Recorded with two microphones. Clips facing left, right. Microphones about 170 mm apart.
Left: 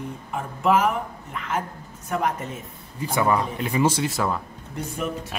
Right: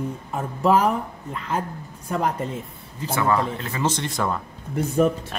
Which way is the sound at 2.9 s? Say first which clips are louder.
Even; 15° left (ahead or behind).